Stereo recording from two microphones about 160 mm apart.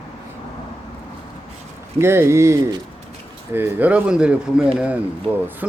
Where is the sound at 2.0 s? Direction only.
15° right (ahead or behind).